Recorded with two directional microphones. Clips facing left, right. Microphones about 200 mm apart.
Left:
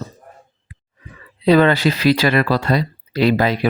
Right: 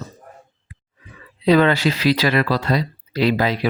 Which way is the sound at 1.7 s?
50° left (ahead or behind).